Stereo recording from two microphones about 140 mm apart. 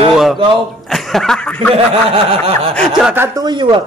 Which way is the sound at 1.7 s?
45° right (ahead or behind).